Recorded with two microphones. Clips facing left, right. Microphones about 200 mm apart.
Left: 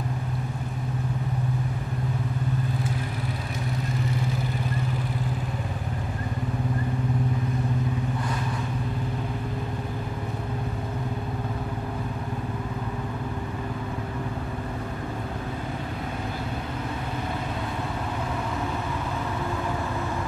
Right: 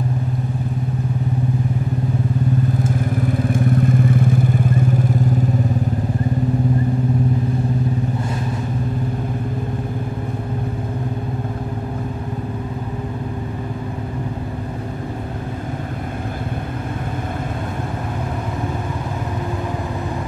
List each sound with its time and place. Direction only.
3.4 s vehicle: 50° right (ahead or behind)